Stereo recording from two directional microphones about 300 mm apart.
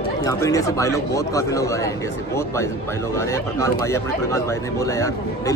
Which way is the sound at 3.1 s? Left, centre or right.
Centre.